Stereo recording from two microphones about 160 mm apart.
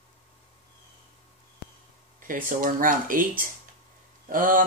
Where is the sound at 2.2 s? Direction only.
60° right (ahead or behind).